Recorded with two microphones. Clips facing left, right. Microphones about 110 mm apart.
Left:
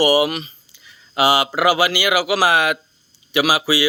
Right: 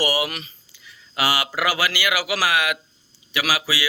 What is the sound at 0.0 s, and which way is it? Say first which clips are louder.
Speech: left 8 dB; 20° left (ahead or behind).